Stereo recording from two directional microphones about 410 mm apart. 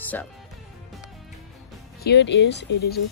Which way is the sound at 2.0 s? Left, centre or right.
Left.